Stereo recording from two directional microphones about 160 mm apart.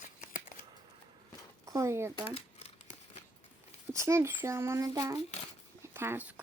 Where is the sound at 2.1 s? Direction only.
40° left (ahead or behind).